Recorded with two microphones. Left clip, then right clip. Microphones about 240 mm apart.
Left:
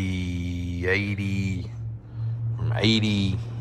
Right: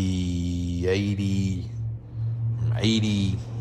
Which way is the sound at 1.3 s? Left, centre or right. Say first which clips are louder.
Right 1 dB; right.